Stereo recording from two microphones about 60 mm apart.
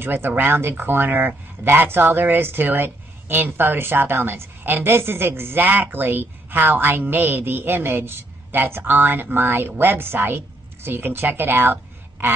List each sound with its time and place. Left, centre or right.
0.0 s speech: right